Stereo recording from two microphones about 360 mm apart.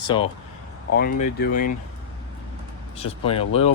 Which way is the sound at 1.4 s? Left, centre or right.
Left.